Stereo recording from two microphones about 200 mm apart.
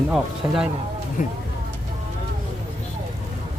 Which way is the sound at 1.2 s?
40° left (ahead or behind).